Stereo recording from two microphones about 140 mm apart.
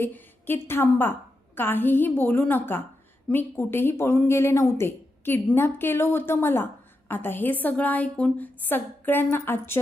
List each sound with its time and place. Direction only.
0.0 s a woman's voice: 15° left (ahead or behind)